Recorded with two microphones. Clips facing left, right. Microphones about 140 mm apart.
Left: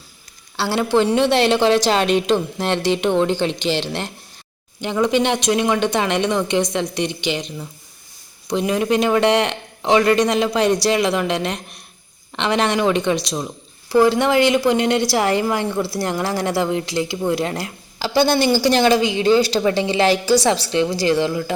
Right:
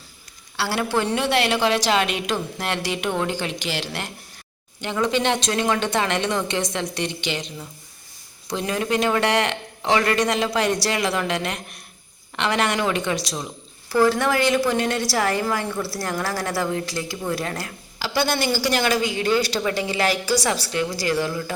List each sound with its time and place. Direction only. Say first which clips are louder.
0.5 s a woman's voice: left 5 dB; 20° left (ahead or behind)